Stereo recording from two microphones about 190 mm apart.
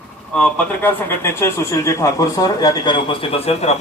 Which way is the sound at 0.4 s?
10° left (ahead or behind).